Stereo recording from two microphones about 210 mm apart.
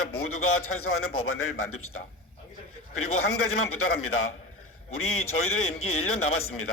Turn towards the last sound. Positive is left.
turn(degrees=85)